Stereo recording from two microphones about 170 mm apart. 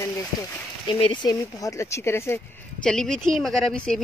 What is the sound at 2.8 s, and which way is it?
Speech, 5° left (ahead or behind).